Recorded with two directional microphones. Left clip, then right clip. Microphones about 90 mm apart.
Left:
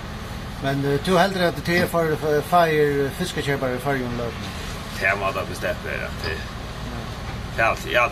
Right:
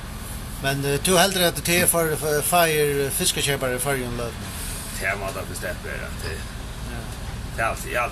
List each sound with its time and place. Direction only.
0.7 s speech: 10° right (ahead or behind)
5.0 s speech: 30° left (ahead or behind)
7.5 s speech: 25° left (ahead or behind)